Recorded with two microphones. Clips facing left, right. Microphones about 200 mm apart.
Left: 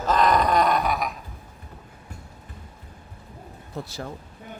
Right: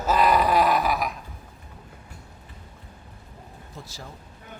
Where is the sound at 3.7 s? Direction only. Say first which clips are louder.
Left 9 dB; 60° left (ahead or behind).